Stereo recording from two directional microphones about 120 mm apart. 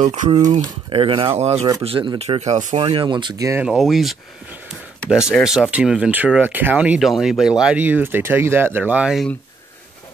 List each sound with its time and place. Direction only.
0.0 s speech: 90° right
0.6 s speech: 45° right (ahead or behind)
1.4 s speech: 60° right (ahead or behind)
1.8 s speech: 50° right (ahead or behind); by 2.8 s 75° right (ahead or behind)
2.8 s speech: 45° right (ahead or behind)
3.3 s speech: 25° right (ahead or behind)
3.6 s speech: centre (ahead or behind)
5.4 s speech: 5° right (ahead or behind)
7.0 s speech: centre (ahead or behind)